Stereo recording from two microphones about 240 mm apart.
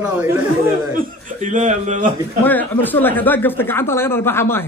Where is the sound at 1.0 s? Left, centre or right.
Right.